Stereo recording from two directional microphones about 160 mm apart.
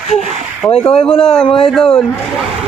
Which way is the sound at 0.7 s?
35° left (ahead or behind).